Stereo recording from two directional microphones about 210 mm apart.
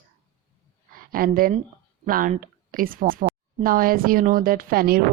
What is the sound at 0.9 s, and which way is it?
A woman's voice, 40° right (ahead or behind).